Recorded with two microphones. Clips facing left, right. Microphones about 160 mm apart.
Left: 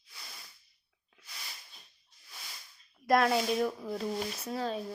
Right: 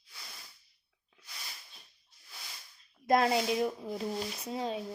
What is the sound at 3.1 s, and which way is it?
Speech, 25° right (ahead or behind).